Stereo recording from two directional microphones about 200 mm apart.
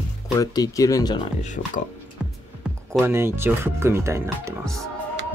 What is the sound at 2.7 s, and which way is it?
Music, 5° right (ahead or behind).